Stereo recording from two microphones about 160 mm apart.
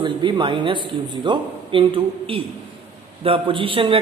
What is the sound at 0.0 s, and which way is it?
A woman's voice, 30° right (ahead or behind).